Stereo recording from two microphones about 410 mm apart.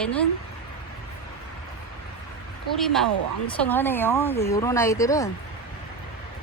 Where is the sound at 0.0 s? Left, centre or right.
Centre.